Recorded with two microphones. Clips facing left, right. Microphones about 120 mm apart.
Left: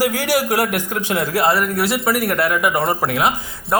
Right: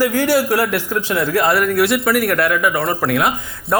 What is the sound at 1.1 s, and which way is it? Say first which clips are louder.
Speech: right 1 dB; 30° left (ahead or behind).